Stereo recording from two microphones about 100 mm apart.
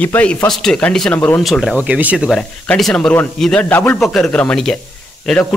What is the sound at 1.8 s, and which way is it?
Speech, 15° right (ahead or behind).